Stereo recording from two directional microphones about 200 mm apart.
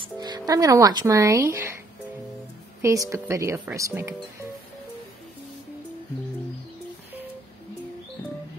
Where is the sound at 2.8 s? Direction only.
15° right (ahead or behind).